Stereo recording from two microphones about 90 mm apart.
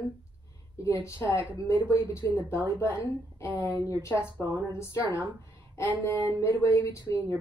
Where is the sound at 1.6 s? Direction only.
30° left (ahead or behind).